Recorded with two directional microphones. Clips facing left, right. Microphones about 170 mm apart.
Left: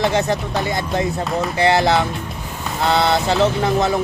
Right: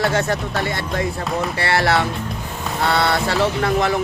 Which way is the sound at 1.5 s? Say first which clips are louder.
Left 4 dB; 20° left (ahead or behind).